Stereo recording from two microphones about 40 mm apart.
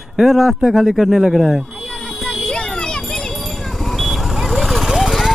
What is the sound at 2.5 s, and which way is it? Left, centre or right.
Children playing, left.